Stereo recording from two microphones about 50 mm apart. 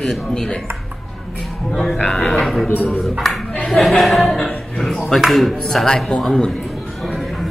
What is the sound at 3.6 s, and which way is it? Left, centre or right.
Chuckle, centre.